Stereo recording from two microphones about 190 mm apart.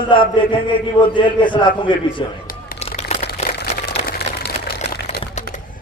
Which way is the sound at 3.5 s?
55° left (ahead or behind).